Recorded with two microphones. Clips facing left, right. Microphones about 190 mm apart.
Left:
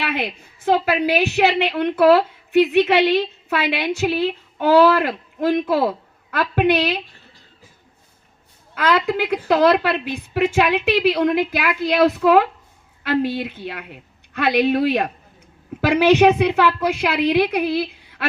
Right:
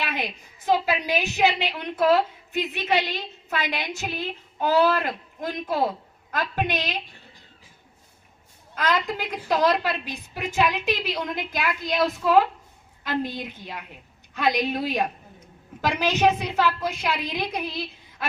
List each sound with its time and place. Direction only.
0.0 s a woman's voice: 60° left (ahead or behind)
8.7 s a woman's voice: 75° left (ahead or behind)